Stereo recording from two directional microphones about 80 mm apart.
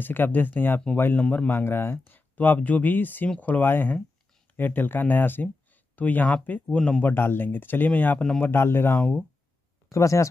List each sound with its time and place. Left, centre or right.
0.0 s speech: left
1.2 s speech: centre
1.5 s speech: left
8.2 s speech: centre
8.5 s speech: left
9.8 s speech: left